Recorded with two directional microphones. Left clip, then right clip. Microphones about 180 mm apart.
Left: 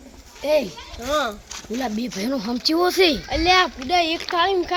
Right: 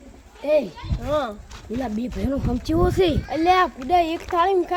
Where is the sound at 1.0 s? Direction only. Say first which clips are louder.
Left 1 dB; 15° right (ahead or behind).